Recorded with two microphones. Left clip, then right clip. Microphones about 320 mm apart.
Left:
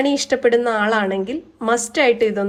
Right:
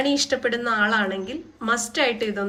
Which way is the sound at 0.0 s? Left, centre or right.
Centre.